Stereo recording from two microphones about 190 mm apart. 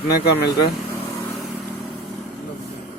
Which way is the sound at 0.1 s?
60° left (ahead or behind).